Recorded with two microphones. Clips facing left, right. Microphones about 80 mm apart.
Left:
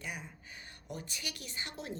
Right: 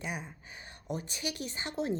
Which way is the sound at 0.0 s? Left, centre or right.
Centre.